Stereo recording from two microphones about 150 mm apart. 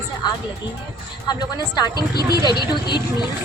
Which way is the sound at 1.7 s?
30° left (ahead or behind).